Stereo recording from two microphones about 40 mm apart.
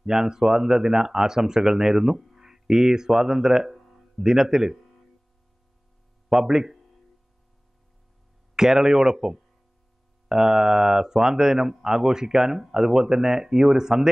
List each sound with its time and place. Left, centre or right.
0.0 s speech: centre
3.8 s a sound: centre
4.2 s speech: centre
6.2 s speech: centre
8.5 s speech: centre